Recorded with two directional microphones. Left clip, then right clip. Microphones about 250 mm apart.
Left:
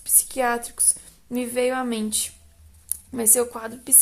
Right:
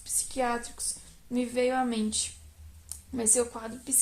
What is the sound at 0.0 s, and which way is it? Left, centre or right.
A woman's voice, left.